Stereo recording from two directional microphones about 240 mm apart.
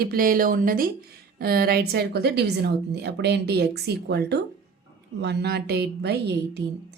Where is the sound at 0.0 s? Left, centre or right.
Right.